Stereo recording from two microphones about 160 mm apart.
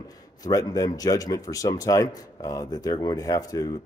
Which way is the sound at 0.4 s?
25° left (ahead or behind).